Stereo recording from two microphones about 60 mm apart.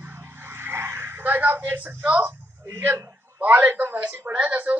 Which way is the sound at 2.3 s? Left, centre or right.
Right.